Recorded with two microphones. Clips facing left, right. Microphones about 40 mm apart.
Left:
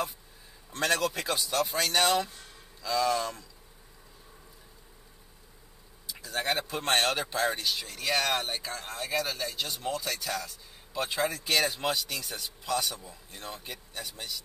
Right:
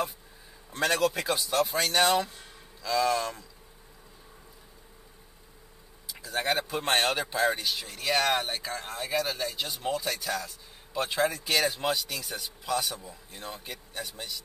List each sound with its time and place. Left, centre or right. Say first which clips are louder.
0.7 s speech: right 2 dB; centre
6.0 s speech: right 2 dB; centre